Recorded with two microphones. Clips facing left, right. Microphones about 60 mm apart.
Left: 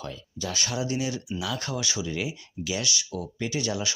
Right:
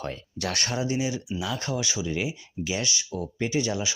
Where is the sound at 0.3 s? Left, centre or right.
Right.